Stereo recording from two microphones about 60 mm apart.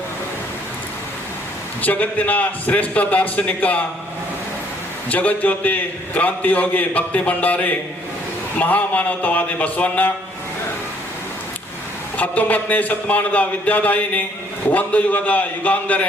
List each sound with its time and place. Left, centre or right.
1.8 s a man's voice: left
5.0 s a man's voice: left
12.1 s a man's voice: left